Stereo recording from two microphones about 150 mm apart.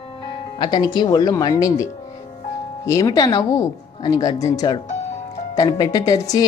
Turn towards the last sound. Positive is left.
turn(degrees=25)  # may be behind; listen again after turning